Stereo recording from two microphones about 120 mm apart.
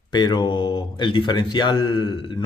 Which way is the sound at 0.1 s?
40° left (ahead or behind).